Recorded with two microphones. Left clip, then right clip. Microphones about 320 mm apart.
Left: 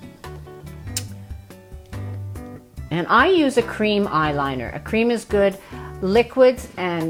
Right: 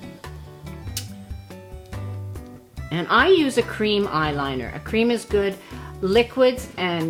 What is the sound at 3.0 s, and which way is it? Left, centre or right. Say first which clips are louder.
Speech: left 1 dB; left.